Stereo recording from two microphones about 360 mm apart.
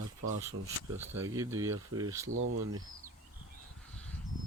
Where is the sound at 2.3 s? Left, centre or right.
Right.